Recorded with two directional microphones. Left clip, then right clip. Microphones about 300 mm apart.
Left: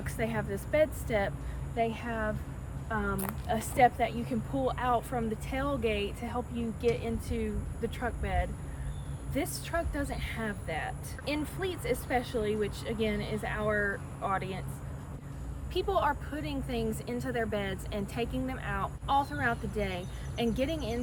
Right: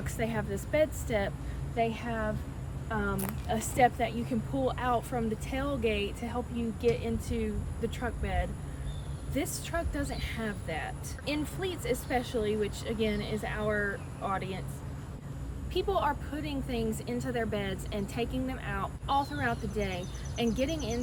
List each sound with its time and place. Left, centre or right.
0.0 s a woman's voice: centre
15.7 s a woman's voice: centre